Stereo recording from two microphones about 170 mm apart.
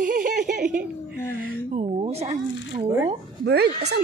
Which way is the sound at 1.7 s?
35° right (ahead or behind).